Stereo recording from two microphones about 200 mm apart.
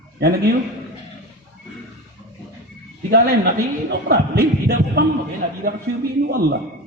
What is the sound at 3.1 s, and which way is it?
A man's voice, 55° right (ahead or behind).